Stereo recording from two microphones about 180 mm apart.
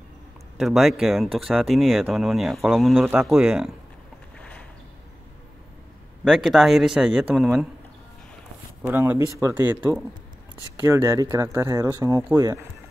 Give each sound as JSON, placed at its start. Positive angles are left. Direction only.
{"t": 0.6, "sound": "speech", "side_deg": 0}
{"t": 4.4, "sound": "boat", "side_deg": 5}
{"t": 6.2, "sound": "speech", "side_deg": 0}
{"t": 8.8, "sound": "speech", "side_deg": -10}